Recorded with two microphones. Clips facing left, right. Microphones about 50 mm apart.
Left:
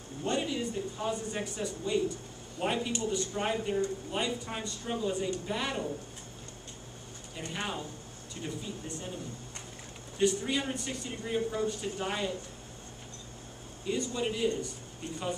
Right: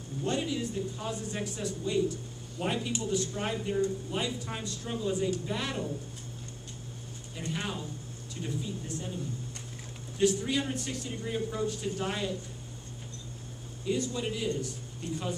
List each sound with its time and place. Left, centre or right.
0.2 s speech: centre
7.4 s speech: centre
10.1 s speech: centre
13.8 s speech: centre
15.0 s speech: left